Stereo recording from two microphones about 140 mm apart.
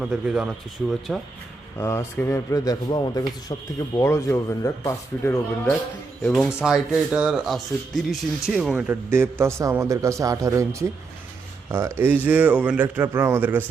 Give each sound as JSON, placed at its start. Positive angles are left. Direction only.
{"t": 0.0, "sound": "speech", "side_deg": -5}
{"t": 1.8, "sound": "speech", "side_deg": 20}
{"t": 6.3, "sound": "speech", "side_deg": 0}